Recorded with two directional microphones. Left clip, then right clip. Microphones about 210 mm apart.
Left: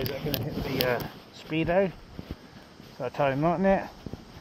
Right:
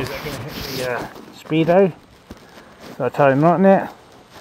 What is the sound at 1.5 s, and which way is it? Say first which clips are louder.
Speech: right 10 dB; 55° right (ahead or behind).